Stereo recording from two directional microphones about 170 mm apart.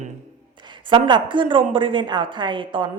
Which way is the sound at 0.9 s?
30° right (ahead or behind).